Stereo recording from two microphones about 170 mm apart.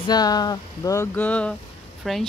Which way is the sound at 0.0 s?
25° left (ahead or behind).